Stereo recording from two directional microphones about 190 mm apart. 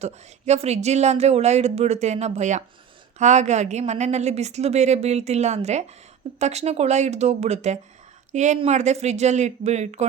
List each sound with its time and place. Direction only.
0.0 s a woman's voice: 35° right (ahead or behind)